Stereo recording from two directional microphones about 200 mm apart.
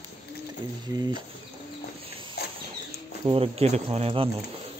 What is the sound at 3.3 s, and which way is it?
Speech, 30° right (ahead or behind).